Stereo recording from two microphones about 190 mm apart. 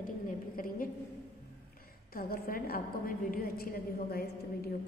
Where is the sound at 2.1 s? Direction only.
50° left (ahead or behind).